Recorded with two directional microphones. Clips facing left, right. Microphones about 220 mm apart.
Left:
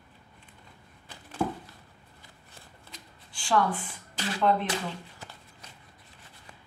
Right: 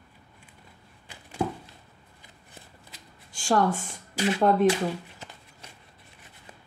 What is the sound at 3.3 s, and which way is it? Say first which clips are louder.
Speech: right 3 dB; 45° right (ahead or behind).